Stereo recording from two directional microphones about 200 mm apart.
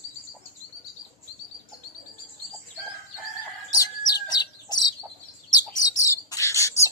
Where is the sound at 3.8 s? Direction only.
20° left (ahead or behind).